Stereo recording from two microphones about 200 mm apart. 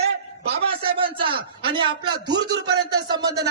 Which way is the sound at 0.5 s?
25° right (ahead or behind).